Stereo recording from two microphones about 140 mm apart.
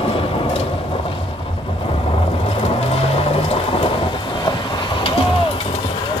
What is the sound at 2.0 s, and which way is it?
Vehicle, 45° left (ahead or behind).